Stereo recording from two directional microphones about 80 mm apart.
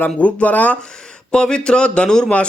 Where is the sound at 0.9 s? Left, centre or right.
Centre.